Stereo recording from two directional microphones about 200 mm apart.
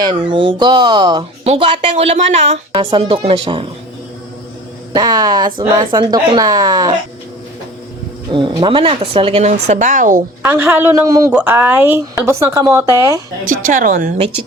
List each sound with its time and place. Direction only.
0.0 s speech: 25° right (ahead or behind)
4.9 s speech: 20° right (ahead or behind)
8.3 s speech: 25° right (ahead or behind)
10.4 s speech: 10° right (ahead or behind)
13.7 s a woman's voice: 40° right (ahead or behind)